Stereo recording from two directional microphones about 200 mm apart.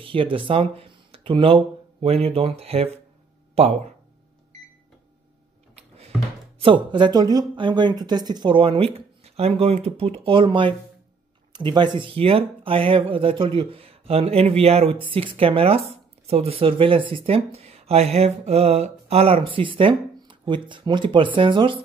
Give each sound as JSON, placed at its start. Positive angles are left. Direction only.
{"t": 0.0, "sound": "speech", "side_deg": -25}
{"t": 5.8, "sound": "a sound", "side_deg": -30}
{"t": 6.6, "sound": "speech", "side_deg": -25}